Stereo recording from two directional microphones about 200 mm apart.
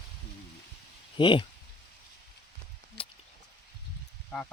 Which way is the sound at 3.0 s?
25° left (ahead or behind).